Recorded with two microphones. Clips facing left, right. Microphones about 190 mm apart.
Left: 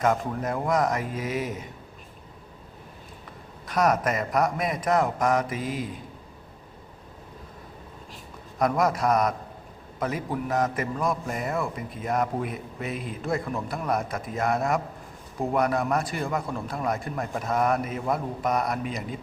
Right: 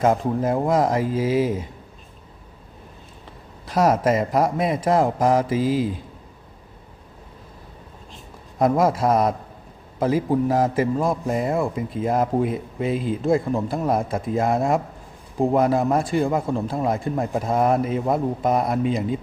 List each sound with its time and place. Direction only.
0.0 s a man's voice: 30° right (ahead or behind)
3.7 s a man's voice: 25° right (ahead or behind)
8.1 s a sound: 25° right (ahead or behind)
10.0 s a man's voice: 30° right (ahead or behind)